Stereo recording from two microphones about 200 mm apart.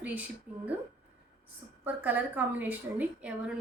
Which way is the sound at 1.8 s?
10° right (ahead or behind).